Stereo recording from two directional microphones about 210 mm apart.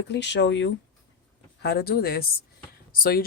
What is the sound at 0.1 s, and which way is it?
Speech, 55° left (ahead or behind).